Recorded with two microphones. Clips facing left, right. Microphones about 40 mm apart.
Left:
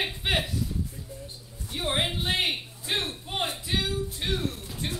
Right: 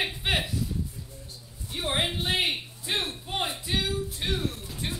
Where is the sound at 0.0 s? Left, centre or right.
Centre.